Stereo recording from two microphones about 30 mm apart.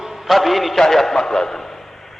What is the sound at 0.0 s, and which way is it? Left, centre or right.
A man's voice, centre.